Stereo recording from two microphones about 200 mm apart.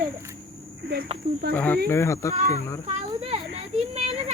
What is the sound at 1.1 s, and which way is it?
Snake, 30° right (ahead or behind).